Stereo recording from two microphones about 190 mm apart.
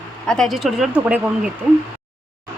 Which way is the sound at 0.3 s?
Centre (ahead or behind).